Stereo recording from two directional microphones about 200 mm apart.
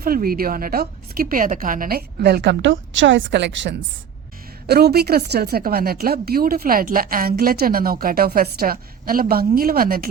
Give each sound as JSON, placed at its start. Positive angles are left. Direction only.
{"t": 0.0, "sound": "a woman's voice", "side_deg": -45}